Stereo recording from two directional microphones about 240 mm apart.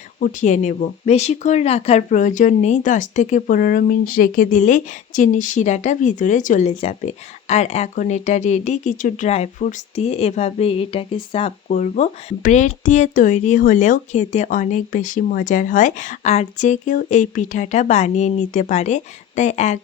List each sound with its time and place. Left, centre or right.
0.2 s speech: left